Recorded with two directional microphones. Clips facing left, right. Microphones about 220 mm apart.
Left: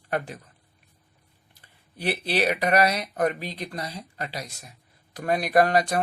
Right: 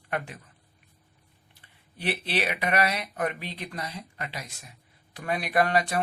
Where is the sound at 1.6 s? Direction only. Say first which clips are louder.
Left 4 dB; 40° left (ahead or behind).